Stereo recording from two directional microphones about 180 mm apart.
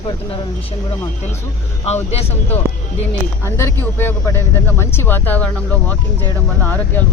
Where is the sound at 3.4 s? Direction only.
15° left (ahead or behind).